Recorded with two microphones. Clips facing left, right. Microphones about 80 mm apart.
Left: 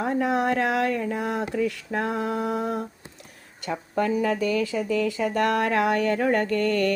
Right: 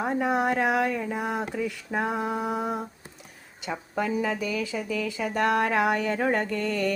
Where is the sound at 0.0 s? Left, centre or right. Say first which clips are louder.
Left 1 dB; centre.